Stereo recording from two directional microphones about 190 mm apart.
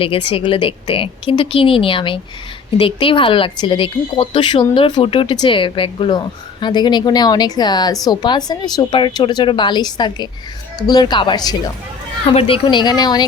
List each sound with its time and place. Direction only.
0.0 s a woman's voice: 30° left (ahead or behind)